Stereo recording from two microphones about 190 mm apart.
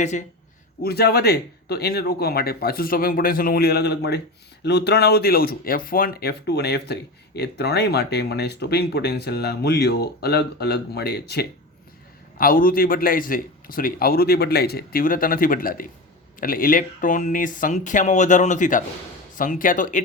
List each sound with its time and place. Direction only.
0.0 s speech: 40° left (ahead or behind)
0.8 s speech: 55° left (ahead or behind)
12.4 s a man's voice: 50° left (ahead or behind)